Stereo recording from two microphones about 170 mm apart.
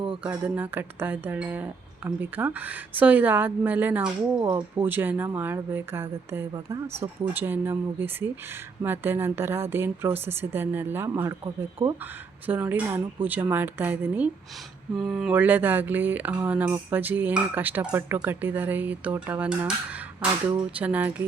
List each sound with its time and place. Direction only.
0.2 s speech: 10° right (ahead or behind)